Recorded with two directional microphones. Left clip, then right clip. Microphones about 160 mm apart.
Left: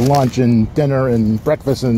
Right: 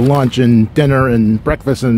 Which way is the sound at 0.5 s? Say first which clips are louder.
Right 3 dB; 40° right (ahead or behind).